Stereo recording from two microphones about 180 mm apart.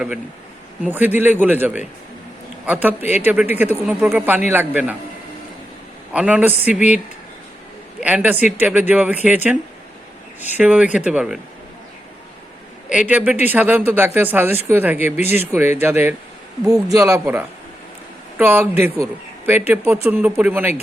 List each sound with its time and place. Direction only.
0.9 s speech: 10° right (ahead or behind)
6.1 s speech: 5° right (ahead or behind)
8.0 s speech: 10° right (ahead or behind)
10.6 s speech: 5° right (ahead or behind)
12.9 s speech: 5° right (ahead or behind)